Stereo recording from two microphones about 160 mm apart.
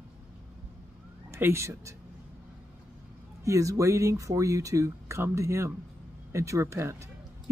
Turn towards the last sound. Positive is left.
turn(degrees=-20)  # may be behind; listen again after turning